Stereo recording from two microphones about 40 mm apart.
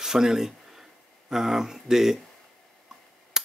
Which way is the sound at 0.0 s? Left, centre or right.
Centre.